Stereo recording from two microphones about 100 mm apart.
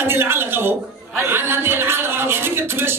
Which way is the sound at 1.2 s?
25° right (ahead or behind).